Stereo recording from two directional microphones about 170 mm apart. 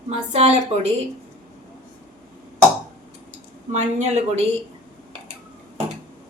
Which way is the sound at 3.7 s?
45° right (ahead or behind).